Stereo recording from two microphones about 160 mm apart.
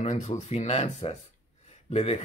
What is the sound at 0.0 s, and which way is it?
Speech, 45° left (ahead or behind).